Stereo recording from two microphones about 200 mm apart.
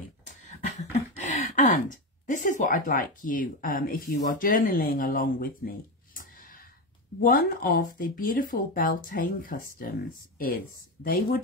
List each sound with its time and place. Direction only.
0.5 s speech: 35° left (ahead or behind)